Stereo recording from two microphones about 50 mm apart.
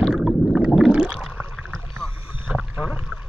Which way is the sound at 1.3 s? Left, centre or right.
Right.